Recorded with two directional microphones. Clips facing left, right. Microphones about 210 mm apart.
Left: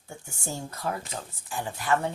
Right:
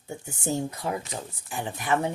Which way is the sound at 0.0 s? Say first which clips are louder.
Right 6 dB; 20° right (ahead or behind).